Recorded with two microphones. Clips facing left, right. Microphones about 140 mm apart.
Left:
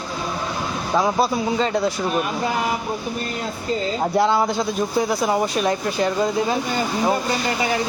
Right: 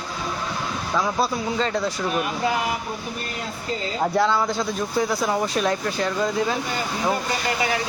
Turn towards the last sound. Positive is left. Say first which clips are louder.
# left 3 dB
turn(degrees=20)  # may be behind; listen again after turning